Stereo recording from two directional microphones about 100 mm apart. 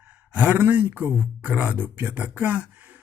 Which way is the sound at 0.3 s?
15° right (ahead or behind).